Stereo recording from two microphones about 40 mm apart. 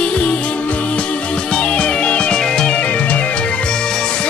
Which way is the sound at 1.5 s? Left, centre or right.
Left.